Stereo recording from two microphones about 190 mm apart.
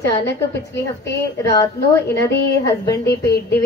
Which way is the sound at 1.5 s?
15° left (ahead or behind).